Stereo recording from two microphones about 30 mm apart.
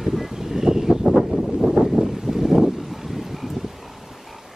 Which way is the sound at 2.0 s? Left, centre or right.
Centre.